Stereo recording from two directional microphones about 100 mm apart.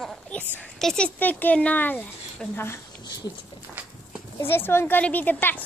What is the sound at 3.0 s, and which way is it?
Dog, 45° left (ahead or behind).